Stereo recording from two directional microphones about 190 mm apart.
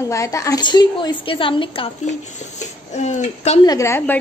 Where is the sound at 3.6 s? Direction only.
15° left (ahead or behind).